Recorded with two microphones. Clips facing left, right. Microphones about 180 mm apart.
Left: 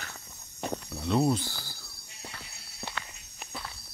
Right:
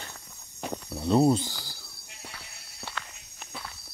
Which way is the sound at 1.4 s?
15° right (ahead or behind).